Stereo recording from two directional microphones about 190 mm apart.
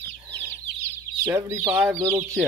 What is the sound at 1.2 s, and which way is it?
Speech, 15° right (ahead or behind).